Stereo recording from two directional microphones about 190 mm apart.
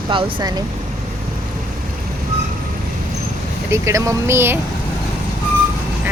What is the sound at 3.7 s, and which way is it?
Speech, 15° right (ahead or behind).